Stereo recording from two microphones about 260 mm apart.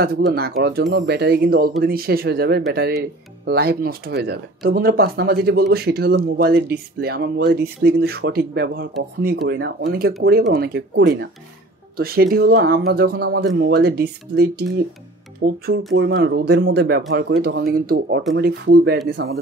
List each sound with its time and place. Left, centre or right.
0.0 s speech: right